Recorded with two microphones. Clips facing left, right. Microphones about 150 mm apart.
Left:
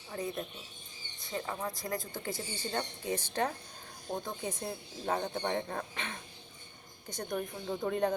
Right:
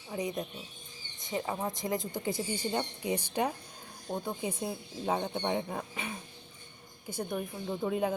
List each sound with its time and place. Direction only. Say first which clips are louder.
0.1 s speech: right 3 dB; 15° right (ahead or behind)